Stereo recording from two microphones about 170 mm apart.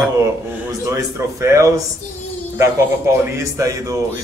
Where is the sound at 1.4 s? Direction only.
15° right (ahead or behind).